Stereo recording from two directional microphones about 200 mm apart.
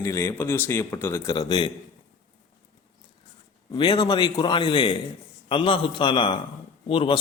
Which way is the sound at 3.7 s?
20° left (ahead or behind).